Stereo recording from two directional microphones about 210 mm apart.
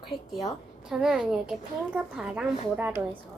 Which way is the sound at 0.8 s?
5° right (ahead or behind).